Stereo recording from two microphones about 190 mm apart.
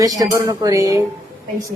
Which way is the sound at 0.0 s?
20° right (ahead or behind).